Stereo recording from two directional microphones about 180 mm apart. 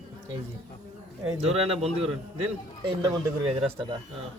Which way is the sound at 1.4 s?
35° right (ahead or behind).